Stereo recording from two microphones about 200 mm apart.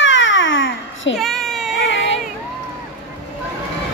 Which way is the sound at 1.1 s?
Centre (ahead or behind).